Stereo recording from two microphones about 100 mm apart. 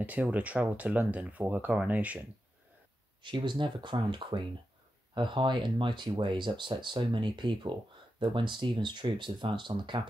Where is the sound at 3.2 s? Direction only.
50° right (ahead or behind).